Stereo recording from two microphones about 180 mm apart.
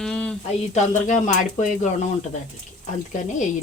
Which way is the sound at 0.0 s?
5° left (ahead or behind).